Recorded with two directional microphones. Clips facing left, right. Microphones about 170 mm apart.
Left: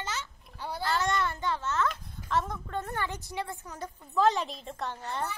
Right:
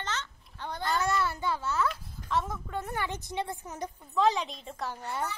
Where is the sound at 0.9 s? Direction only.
10° right (ahead or behind).